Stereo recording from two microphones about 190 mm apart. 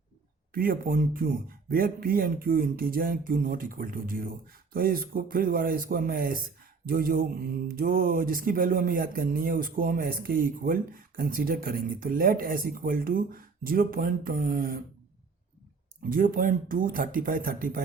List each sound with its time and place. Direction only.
0.5 s mantra: 50° right (ahead or behind)
16.0 s mantra: 45° right (ahead or behind)